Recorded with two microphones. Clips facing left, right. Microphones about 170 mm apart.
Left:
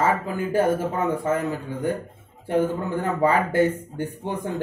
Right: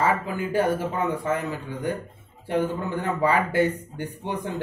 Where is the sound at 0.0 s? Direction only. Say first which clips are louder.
Left 1 dB; 45° left (ahead or behind).